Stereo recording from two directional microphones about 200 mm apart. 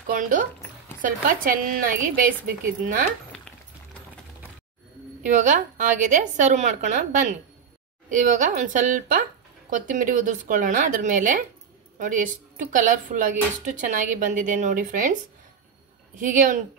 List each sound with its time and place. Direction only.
0.0 s a woman's voice: 40° right (ahead or behind)
5.2 s speech: 40° right (ahead or behind)
16.2 s speech: 40° right (ahead or behind)